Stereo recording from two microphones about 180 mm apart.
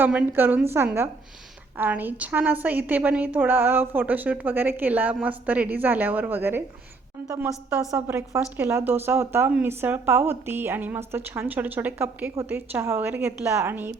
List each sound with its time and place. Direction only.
0.0 s a woman's voice: 10° right (ahead or behind)
7.9 s a woman's voice: 15° right (ahead or behind)